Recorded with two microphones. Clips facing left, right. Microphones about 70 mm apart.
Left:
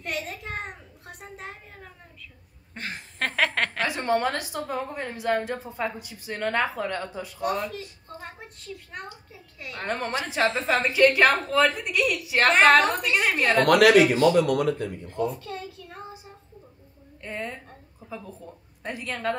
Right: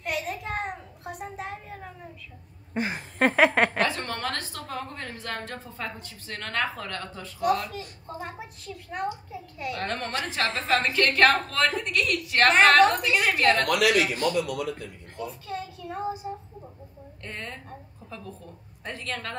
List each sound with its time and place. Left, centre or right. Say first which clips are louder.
0.0 s a sound: right 2 dB; centre
2.7 s a sound: right 7 dB; centre
3.8 s a woman's voice: left 4 dB; centre
7.3 s a child's voice: right 3 dB; centre
13.7 s speech: left 6 dB; left
15.3 s a child's voice: right 1 dB; centre
17.2 s a woman's voice: left 4 dB; centre